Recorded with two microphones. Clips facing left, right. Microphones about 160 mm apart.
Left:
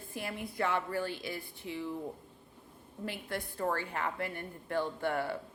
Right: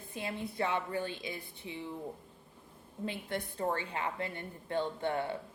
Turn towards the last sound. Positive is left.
turn(degrees=-20)  # may be behind; listen again after turning